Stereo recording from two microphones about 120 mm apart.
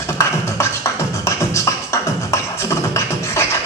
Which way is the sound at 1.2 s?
25° left (ahead or behind).